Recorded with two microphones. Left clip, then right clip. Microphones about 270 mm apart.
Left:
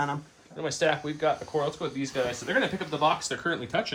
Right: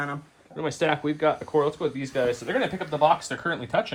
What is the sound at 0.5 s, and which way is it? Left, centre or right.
Speech, right.